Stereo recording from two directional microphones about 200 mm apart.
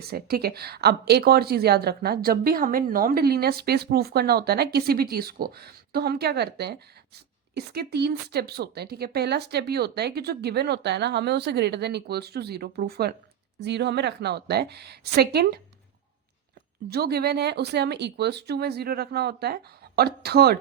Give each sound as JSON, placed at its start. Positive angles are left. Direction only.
{"t": 0.1, "sound": "a woman's voice", "side_deg": -50}
{"t": 16.9, "sound": "a woman's voice", "side_deg": -50}